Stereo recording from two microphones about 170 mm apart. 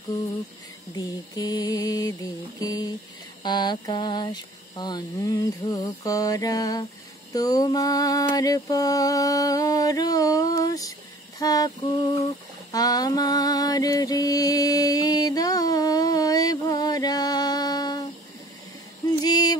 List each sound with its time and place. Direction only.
0.9 s mantra: 20° left (ahead or behind)
12.7 s music: 20° left (ahead or behind)
19.2 s music: 25° left (ahead or behind)